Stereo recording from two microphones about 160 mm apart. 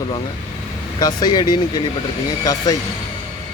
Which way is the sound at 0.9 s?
25° left (ahead or behind).